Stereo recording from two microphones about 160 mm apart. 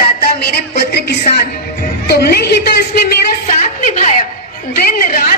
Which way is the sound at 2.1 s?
80° left.